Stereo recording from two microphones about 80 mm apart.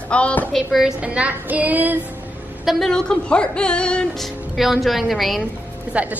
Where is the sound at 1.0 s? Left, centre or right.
Centre.